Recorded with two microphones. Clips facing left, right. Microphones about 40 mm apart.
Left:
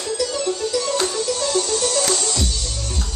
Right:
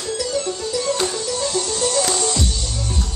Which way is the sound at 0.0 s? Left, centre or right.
Left.